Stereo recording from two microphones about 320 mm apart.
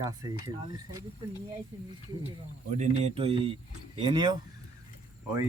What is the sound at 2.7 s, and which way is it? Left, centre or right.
Speech, right.